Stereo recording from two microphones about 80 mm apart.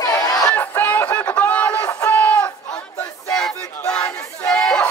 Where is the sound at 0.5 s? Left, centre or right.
Left.